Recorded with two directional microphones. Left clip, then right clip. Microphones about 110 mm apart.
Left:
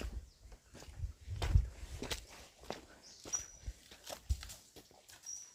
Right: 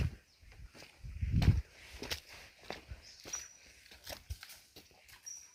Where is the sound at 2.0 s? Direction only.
10° left (ahead or behind).